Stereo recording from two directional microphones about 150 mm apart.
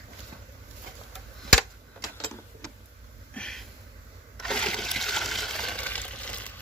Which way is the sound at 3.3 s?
5° left (ahead or behind).